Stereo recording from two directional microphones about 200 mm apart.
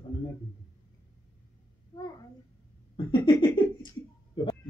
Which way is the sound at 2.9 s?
25° left (ahead or behind).